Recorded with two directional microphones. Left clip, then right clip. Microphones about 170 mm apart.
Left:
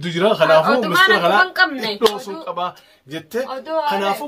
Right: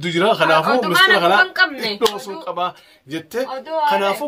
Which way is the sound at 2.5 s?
30° right (ahead or behind).